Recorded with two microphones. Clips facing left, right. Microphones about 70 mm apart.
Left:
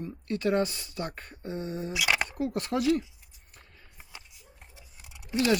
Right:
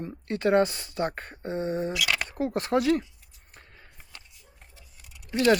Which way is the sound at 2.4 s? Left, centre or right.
Right.